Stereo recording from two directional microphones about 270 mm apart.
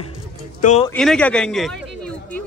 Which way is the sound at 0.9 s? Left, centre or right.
Centre.